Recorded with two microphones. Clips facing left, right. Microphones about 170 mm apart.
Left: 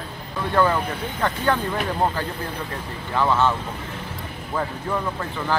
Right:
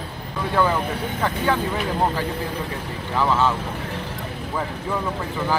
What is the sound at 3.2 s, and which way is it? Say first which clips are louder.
Speech: even; 5° right (ahead or behind).